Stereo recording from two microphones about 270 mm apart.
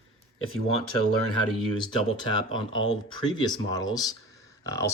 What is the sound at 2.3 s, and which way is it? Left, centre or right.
Speech, centre.